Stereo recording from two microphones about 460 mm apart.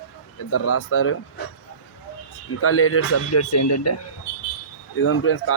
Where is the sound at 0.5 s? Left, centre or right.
Left.